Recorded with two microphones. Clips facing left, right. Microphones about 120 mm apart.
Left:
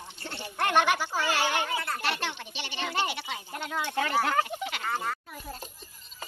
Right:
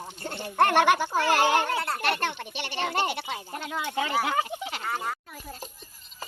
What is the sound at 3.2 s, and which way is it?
Speech, 40° right (ahead or behind).